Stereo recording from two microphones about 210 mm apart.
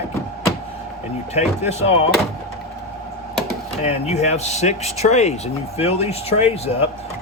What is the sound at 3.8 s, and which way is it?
Speech, 30° left (ahead or behind).